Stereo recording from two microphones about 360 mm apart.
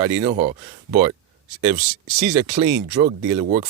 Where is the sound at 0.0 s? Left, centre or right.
Centre.